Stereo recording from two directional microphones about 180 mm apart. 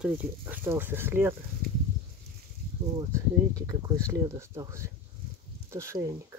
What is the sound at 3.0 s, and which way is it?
Speech, 20° right (ahead or behind).